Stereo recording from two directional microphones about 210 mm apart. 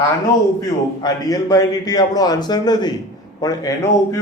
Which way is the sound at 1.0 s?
20° left (ahead or behind).